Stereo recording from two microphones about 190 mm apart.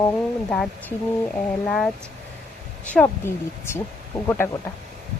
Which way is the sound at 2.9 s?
10° left (ahead or behind).